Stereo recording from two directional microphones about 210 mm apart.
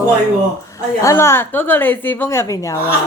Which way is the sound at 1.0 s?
15° left (ahead or behind).